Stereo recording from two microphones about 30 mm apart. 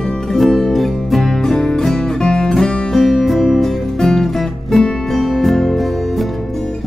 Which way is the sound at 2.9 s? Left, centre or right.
Centre.